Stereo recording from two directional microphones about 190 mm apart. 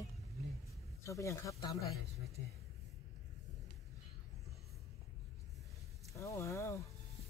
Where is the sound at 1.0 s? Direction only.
15° left (ahead or behind).